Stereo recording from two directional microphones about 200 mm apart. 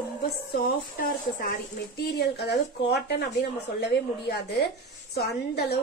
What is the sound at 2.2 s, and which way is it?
A woman's voice, 55° left (ahead or behind).